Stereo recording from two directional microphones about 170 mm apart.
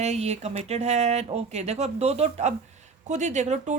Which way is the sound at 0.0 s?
40° right (ahead or behind).